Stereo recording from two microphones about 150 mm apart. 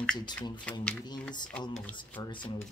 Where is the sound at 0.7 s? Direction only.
10° left (ahead or behind).